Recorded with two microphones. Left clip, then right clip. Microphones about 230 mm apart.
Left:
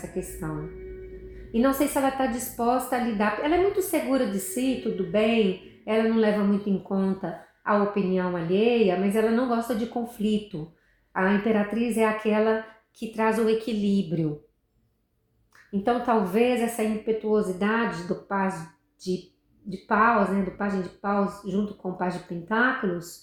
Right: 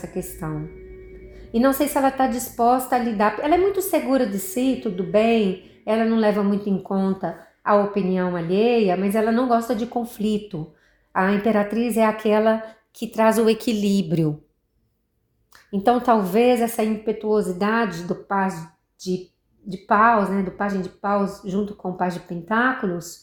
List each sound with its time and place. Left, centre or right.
0.1 s a woman's voice: right
1.6 s a woman's voice: right
15.8 s a woman's voice: right
19.6 s a woman's voice: right